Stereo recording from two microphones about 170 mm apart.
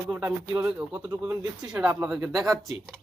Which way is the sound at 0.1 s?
10° right (ahead or behind).